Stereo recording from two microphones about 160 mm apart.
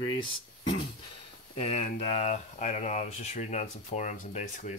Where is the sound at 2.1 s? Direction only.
45° left (ahead or behind).